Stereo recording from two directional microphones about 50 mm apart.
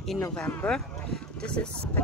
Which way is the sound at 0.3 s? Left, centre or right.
Centre.